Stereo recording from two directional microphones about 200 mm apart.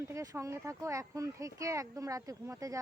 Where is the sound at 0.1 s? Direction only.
15° right (ahead or behind).